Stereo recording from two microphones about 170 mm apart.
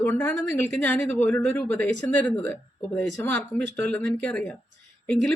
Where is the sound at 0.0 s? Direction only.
10° left (ahead or behind).